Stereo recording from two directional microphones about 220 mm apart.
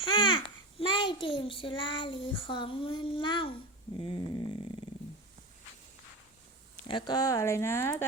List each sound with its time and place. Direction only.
0.1 s a child's voice: 20° left (ahead or behind)
6.8 s speech: 20° left (ahead or behind)